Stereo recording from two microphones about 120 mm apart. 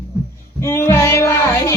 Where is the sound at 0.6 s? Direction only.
20° left (ahead or behind).